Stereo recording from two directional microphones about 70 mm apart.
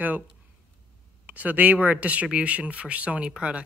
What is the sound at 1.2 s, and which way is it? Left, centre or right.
Speech, right.